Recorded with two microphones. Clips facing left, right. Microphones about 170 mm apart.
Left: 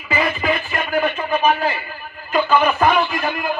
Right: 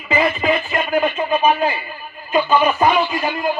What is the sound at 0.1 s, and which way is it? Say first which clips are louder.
Music: right 3 dB; 25° right (ahead or behind).